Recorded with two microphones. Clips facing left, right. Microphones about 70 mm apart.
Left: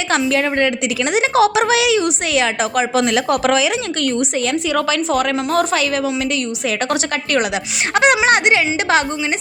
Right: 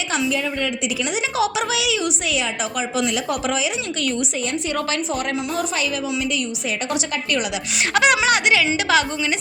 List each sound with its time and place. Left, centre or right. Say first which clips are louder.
0.3 s a woman's voice: left 6 dB; left
5.1 s a woman's voice: left 7 dB; left
6.9 s speech: left 3 dB; left
7.9 s speech: left 4 dB; left